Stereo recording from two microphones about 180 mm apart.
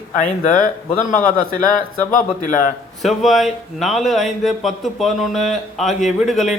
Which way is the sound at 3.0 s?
Centre (ahead or behind).